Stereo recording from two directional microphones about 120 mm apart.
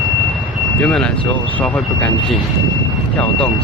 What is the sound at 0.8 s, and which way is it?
Speech, 10° left (ahead or behind).